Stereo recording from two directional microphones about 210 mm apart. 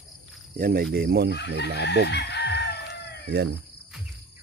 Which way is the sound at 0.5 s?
45° right (ahead or behind).